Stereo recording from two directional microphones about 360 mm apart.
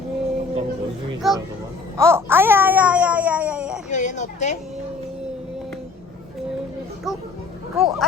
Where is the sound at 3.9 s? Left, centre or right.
Centre.